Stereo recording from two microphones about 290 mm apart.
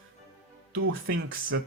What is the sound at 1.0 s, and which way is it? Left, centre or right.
Speech, right.